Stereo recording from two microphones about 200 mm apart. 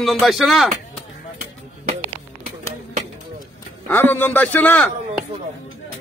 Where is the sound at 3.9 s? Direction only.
10° left (ahead or behind).